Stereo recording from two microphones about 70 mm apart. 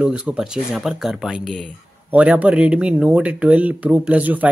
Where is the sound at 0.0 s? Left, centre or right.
Centre.